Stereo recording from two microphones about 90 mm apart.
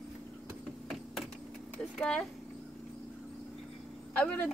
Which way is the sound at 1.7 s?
10° left (ahead or behind).